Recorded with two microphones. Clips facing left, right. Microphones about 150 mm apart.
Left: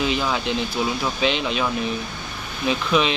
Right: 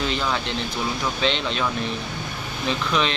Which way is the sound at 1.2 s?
5° left (ahead or behind).